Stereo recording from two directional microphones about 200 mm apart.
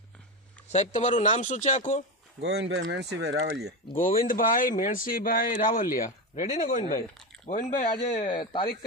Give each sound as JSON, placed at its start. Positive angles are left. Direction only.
{"t": 0.7, "sound": "speech", "side_deg": 35}
{"t": 2.4, "sound": "speech", "side_deg": -55}
{"t": 3.9, "sound": "speech", "side_deg": 40}
{"t": 8.2, "sound": "speech", "side_deg": 25}